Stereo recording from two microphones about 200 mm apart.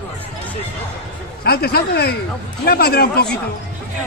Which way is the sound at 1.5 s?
55° left (ahead or behind).